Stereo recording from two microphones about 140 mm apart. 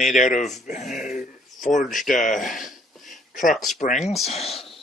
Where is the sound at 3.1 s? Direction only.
70° left (ahead or behind).